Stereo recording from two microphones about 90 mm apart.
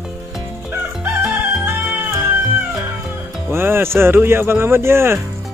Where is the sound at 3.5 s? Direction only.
25° right (ahead or behind).